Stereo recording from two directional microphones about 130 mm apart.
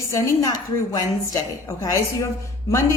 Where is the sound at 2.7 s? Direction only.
25° left (ahead or behind).